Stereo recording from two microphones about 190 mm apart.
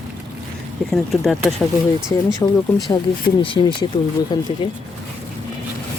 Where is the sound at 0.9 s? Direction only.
Centre (ahead or behind).